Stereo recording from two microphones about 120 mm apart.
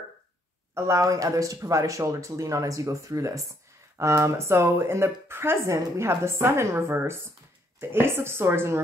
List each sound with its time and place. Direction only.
0.7 s speech: 25° right (ahead or behind)